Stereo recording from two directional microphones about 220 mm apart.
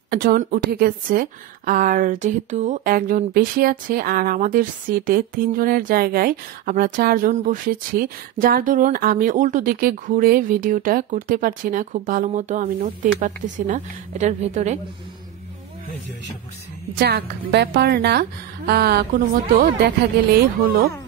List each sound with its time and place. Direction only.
0.1 s a woman's voice: 45° right (ahead or behind)
17.0 s a woman's voice: 50° right (ahead or behind)